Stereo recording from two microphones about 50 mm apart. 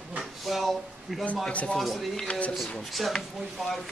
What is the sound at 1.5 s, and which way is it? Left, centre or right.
Speech, left.